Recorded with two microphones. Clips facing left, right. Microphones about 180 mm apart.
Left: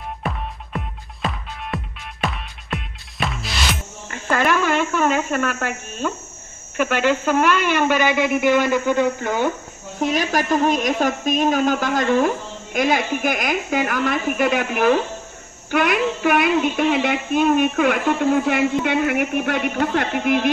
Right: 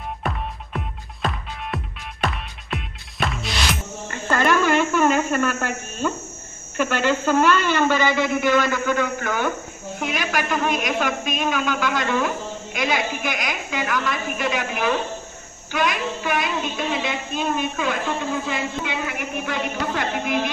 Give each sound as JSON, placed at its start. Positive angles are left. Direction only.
{"t": 0.2, "sound": "music", "side_deg": 0}
{"t": 4.1, "sound": "speech", "side_deg": 5}
{"t": 9.9, "sound": "a woman's voice", "side_deg": 35}
{"t": 15.7, "sound": "child singing", "side_deg": 60}